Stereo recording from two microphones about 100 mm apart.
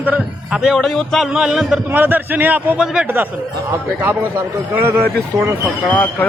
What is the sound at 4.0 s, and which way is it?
A man's voice, 20° right (ahead or behind).